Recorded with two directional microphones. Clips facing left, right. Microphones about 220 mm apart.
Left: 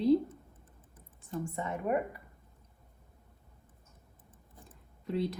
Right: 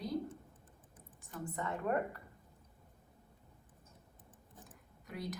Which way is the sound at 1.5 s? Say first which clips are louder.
Left 3 dB; 20° left (ahead or behind).